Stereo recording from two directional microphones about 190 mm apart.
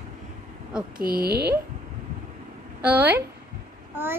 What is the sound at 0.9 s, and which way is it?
Speech, 50° right (ahead or behind).